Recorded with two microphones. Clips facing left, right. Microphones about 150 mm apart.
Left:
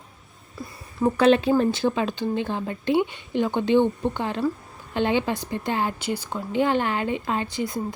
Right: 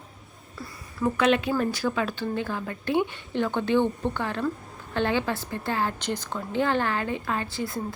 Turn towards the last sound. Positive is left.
turn(degrees=20)  # may be behind; listen again after turning